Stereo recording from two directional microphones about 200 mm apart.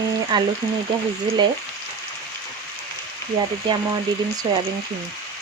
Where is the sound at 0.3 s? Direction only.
20° right (ahead or behind).